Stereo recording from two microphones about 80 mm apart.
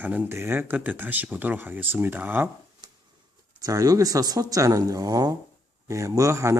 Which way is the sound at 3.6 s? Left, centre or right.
Right.